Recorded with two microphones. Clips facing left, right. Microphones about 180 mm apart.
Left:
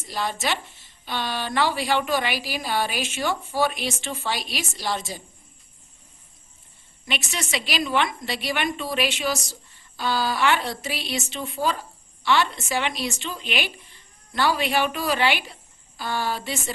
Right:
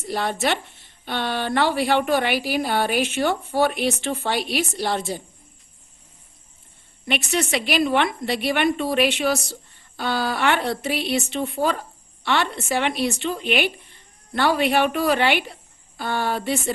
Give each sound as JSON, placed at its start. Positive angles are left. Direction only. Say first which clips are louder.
{"t": 0.0, "sound": "a woman's voice", "louder": "right 4 dB", "side_deg": -60}
{"t": 7.0, "sound": "a woman's voice", "louder": "right 7 dB", "side_deg": -60}